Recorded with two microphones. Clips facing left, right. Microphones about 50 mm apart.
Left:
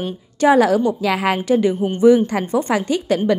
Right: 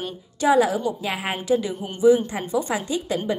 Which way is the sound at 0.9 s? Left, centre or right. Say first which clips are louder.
Left 8 dB; left.